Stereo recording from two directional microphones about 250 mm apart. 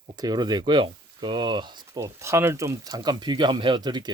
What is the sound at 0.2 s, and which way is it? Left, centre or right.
Speech, centre.